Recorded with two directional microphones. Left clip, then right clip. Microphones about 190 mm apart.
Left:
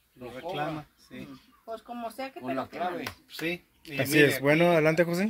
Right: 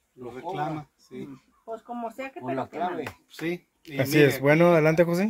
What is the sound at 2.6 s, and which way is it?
Speech, 10° left (ahead or behind).